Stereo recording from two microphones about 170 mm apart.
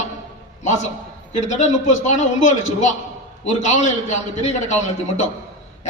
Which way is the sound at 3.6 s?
45° left (ahead or behind).